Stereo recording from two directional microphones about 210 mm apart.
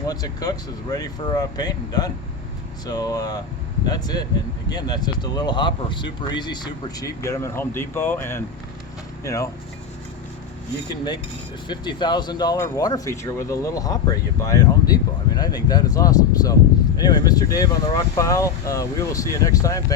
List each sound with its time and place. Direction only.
0.1 s speech: 15° left (ahead or behind)
11.7 s speech: 20° left (ahead or behind)